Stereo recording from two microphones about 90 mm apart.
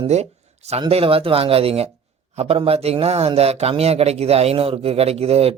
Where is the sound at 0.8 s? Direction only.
90° right.